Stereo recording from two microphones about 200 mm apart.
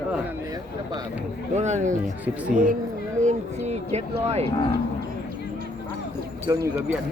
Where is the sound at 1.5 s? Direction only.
35° right (ahead or behind).